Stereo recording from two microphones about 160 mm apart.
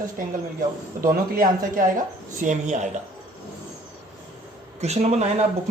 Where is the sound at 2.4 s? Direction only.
50° right (ahead or behind).